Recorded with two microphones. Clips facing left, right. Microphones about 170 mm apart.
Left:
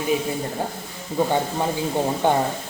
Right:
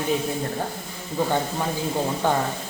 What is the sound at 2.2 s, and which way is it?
Speech, 20° left (ahead or behind).